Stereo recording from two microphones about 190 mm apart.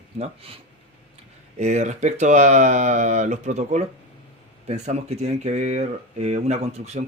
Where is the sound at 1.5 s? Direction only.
35° right (ahead or behind).